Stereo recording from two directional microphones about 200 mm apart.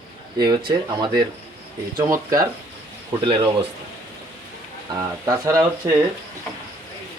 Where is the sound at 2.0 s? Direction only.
15° right (ahead or behind).